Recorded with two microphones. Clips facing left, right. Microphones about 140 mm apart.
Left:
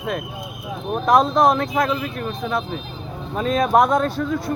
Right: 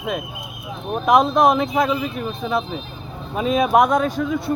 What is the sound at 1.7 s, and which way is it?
Speech, 5° right (ahead or behind).